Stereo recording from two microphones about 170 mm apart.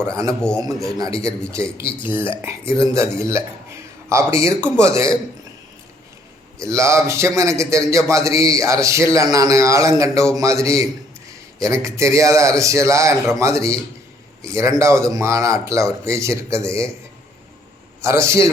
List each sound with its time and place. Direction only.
0.0 s a man's voice: 15° right (ahead or behind)
0.4 s a man's voice: 5° left (ahead or behind)
0.9 s a man's voice: 20° right (ahead or behind)
2.4 s a man's voice: 15° right (ahead or behind)
6.6 s a man's voice: 15° right (ahead or behind)
18.0 s a man's voice: 15° right (ahead or behind)